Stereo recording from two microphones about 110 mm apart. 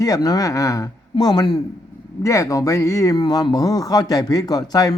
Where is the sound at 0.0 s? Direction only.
35° left (ahead or behind).